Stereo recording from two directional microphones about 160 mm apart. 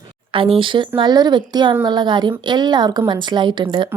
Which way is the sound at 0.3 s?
35° right (ahead or behind).